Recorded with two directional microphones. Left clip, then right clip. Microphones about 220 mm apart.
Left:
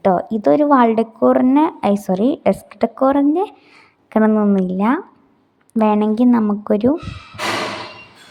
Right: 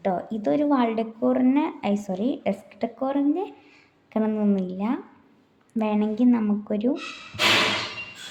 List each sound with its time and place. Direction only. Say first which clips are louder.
0.0 s a woman's voice: left 10 dB; 30° left (ahead or behind)